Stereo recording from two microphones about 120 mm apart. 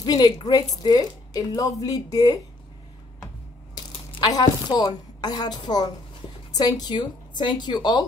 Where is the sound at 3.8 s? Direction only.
40° left (ahead or behind).